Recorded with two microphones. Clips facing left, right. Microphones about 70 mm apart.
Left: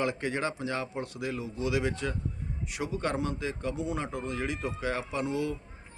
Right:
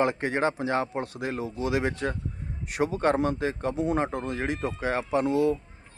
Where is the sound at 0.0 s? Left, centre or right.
Right.